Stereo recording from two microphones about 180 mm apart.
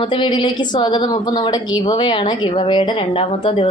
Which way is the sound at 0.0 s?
25° left (ahead or behind).